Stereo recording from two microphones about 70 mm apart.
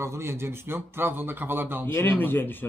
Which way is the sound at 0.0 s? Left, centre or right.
Right.